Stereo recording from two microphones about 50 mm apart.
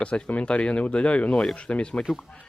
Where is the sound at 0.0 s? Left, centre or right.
Left.